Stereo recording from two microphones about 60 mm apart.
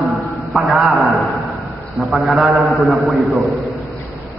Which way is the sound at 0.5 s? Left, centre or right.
Centre.